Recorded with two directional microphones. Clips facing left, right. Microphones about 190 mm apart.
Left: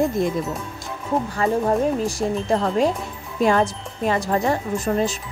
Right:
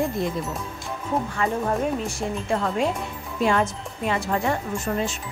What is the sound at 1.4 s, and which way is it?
Speech, 35° left (ahead or behind).